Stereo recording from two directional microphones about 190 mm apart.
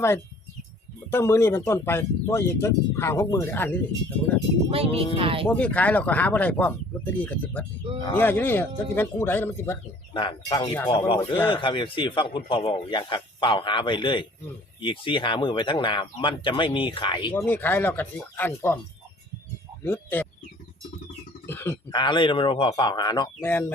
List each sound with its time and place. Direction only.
1.1 s speech: 15° left (ahead or behind)
4.7 s speech: 30° right (ahead or behind)
5.5 s speech: 10° left (ahead or behind)
10.2 s a man's voice: 25° left (ahead or behind)
17.3 s speech: 10° left (ahead or behind)
19.8 s speech: 10° left (ahead or behind)
21.4 s a sound: 10° left (ahead or behind)
21.8 s a man's voice: 25° left (ahead or behind)
23.4 s speech: 10° left (ahead or behind)